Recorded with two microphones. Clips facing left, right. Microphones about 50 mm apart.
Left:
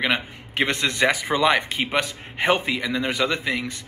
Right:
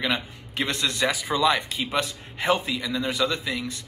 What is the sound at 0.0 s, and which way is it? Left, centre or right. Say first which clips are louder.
Speech: left 3 dB; left.